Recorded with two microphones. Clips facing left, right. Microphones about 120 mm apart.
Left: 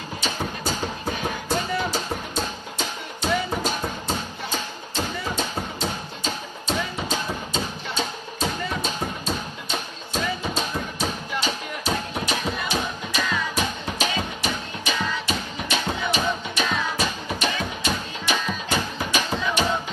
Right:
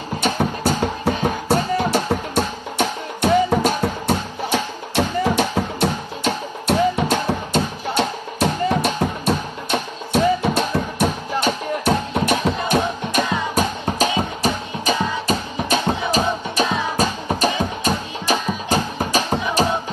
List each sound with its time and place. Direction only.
0.2 s music: 65° right (ahead or behind)
12.6 s music: 50° right (ahead or behind)